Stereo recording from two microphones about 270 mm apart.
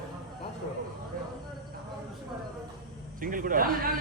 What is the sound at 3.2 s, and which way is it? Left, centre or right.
Speech, right.